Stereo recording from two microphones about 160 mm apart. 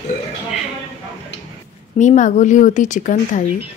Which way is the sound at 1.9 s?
50° left (ahead or behind).